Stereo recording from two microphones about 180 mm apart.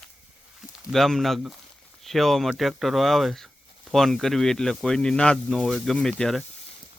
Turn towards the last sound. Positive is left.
turn(degrees=5)  # may be behind; listen again after turning